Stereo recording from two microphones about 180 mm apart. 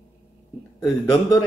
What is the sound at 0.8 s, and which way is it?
Speech, 20° left (ahead or behind).